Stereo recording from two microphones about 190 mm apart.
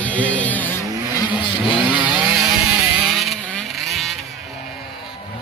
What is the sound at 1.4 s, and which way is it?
Vehicle, 25° left (ahead or behind).